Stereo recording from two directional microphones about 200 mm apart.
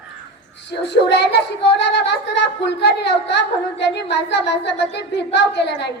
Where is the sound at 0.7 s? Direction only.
60° left (ahead or behind).